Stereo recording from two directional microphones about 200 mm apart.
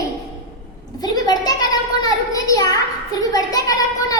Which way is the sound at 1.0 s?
20° left (ahead or behind).